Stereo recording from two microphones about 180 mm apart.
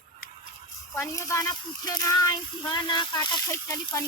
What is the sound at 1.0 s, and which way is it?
Speech, 15° left (ahead or behind).